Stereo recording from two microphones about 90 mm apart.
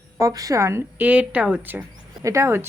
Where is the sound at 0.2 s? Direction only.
35° right (ahead or behind).